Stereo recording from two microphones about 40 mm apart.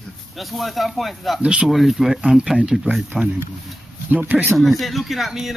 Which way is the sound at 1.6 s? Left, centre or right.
Centre.